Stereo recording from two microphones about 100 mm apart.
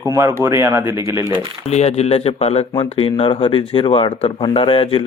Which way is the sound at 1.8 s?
90° left.